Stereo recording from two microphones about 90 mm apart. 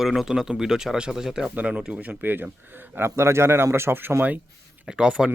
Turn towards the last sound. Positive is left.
turn(degrees=-10)  # may be behind; listen again after turning